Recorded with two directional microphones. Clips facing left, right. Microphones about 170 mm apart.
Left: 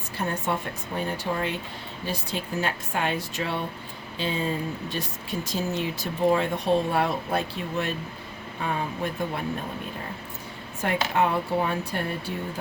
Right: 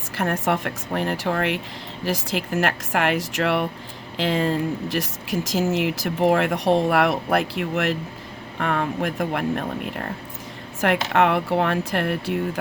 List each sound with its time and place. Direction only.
0.2 s speech: 90° right
2.0 s speech: 90° right
8.5 s speech: 75° right (ahead or behind)